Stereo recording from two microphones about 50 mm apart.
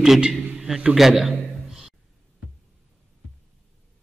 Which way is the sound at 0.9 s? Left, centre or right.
Centre.